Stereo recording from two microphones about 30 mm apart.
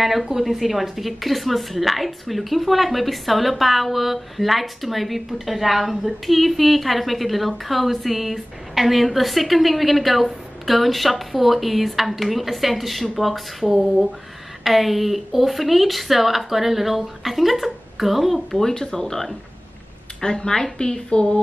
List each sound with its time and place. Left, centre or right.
0.0 s speech: centre
18.6 s speech: centre
20.2 s a woman's voice: left